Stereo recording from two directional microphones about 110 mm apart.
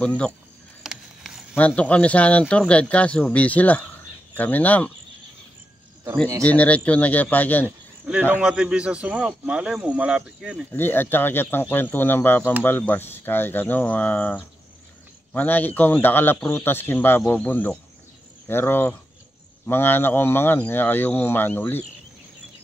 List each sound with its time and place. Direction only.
0.0 s speech: 10° left (ahead or behind)
0.8 s a sound: 5° right (ahead or behind)
1.8 s speech: 10° left (ahead or behind)
6.4 s speech: 10° left (ahead or behind)
8.1 s speech: 10° right (ahead or behind)
10.7 s speech: 20° left (ahead or behind)